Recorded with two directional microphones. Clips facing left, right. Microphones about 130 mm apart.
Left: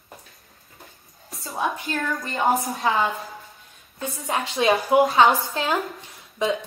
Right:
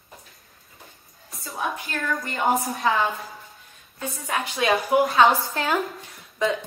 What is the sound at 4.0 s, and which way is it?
A woman's voice, 25° left (ahead or behind).